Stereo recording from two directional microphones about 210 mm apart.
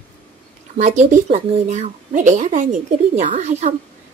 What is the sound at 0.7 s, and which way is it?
A woman's voice, 35° right (ahead or behind).